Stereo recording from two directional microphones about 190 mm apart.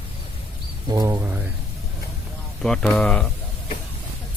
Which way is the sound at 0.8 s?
15° right (ahead or behind).